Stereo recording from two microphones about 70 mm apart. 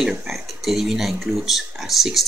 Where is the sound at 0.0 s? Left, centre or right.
Centre.